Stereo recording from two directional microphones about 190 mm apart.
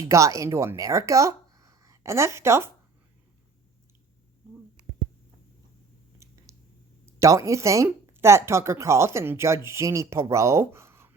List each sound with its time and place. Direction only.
0.1 s speech: 15° right (ahead or behind)
6.2 s a sound: 15° right (ahead or behind)
7.0 s speech: 15° right (ahead or behind)